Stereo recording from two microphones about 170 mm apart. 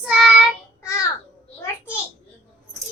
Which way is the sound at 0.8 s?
15° left (ahead or behind).